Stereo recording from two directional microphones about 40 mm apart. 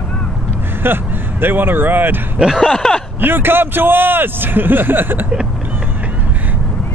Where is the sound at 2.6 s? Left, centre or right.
Centre.